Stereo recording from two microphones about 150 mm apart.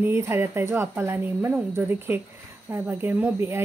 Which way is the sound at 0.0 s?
15° right (ahead or behind).